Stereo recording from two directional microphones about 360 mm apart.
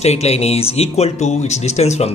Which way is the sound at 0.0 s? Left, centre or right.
Centre.